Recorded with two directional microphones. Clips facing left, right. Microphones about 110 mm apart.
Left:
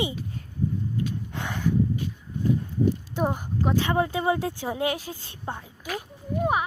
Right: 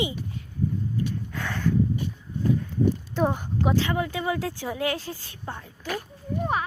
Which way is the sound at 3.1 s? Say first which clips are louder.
Right 2 dB; 10° left (ahead or behind).